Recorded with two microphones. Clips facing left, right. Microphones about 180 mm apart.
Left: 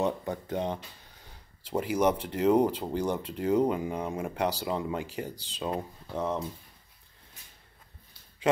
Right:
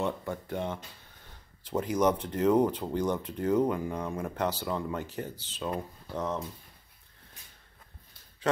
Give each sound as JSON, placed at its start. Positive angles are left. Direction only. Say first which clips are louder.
{"t": 0.0, "sound": "speech", "louder": "left 3 dB", "side_deg": 20}
{"t": 1.6, "sound": "speech", "louder": "even", "side_deg": 10}